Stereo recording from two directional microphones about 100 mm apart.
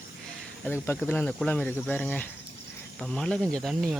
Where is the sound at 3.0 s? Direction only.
5° left (ahead or behind).